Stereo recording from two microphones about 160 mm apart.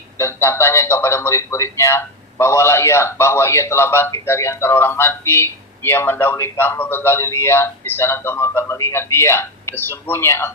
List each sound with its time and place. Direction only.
0.2 s a man's voice: 15° left (ahead or behind)